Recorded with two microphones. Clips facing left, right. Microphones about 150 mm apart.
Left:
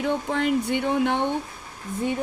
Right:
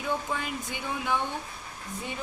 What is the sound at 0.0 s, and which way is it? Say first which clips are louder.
A woman's voice: left 7 dB; 65° left (ahead or behind).